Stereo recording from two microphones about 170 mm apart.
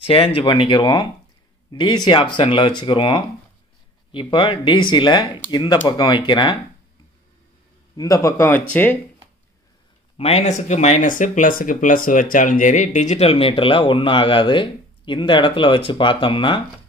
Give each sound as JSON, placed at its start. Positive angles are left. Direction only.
{"t": 0.0, "sound": "speech", "side_deg": 35}
{"t": 7.9, "sound": "speech", "side_deg": 20}
{"t": 10.1, "sound": "speech", "side_deg": 40}